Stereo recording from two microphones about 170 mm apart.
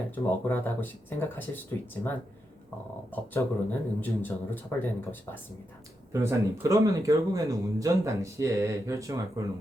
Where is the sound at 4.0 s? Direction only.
10° left (ahead or behind).